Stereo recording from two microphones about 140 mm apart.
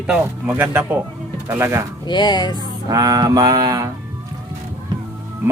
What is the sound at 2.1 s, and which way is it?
Music, 30° left (ahead or behind).